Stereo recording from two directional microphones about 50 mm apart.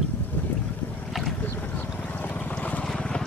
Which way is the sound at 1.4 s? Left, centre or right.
Left.